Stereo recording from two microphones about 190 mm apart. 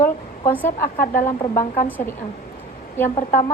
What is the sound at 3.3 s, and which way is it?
Speech, 40° left (ahead or behind).